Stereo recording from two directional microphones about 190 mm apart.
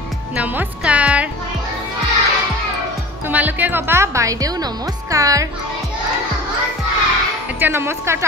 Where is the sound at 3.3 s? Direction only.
10° right (ahead or behind).